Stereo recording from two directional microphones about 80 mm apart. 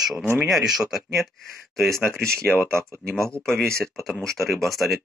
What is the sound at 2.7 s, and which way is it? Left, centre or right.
Speech, right.